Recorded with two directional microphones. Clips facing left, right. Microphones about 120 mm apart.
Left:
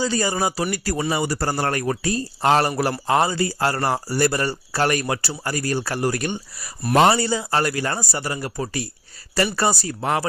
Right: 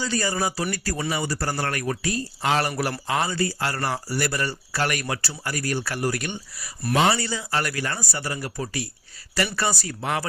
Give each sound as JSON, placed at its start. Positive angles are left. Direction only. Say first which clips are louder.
{"t": 0.0, "sound": "speech", "louder": "left 3 dB", "side_deg": 25}
{"t": 7.2, "sound": "speech", "louder": "left 5 dB", "side_deg": 30}